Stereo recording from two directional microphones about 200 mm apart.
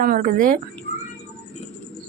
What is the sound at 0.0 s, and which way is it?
Speech, 45° right (ahead or behind).